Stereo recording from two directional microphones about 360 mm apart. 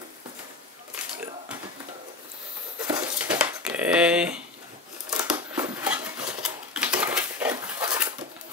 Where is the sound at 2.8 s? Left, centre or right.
Centre.